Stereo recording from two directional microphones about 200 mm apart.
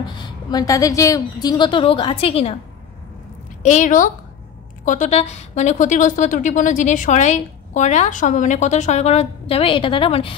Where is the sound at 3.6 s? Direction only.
40° left (ahead or behind).